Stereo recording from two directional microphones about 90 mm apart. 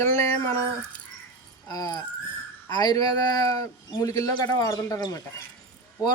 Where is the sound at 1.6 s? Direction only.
45° left (ahead or behind).